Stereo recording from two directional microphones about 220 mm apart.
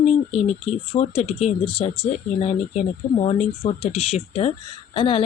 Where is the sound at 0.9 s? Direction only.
30° left (ahead or behind).